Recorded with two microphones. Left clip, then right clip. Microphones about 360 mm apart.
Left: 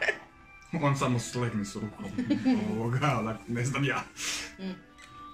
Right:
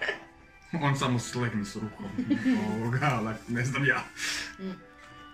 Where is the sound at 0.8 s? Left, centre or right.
Centre.